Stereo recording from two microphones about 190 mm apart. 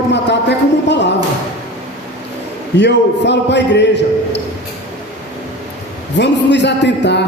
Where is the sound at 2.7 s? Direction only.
65° left (ahead or behind).